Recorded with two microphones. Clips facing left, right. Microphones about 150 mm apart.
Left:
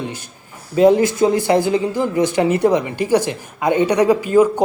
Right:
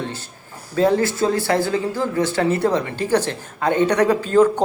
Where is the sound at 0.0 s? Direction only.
15° left (ahead or behind).